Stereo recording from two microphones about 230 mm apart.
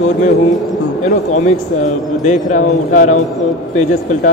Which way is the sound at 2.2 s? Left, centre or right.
Left.